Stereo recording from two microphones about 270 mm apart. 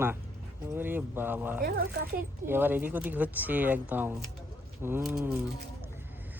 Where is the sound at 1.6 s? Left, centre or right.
Right.